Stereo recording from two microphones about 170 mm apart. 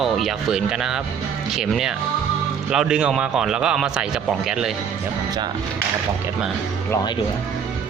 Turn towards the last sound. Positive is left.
turn(degrees=15)  # may be behind; listen again after turning